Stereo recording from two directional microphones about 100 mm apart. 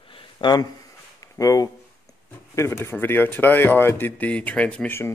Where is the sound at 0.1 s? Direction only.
50° left (ahead or behind).